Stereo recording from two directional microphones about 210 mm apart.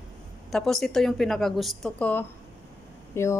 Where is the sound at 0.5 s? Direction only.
Centre (ahead or behind).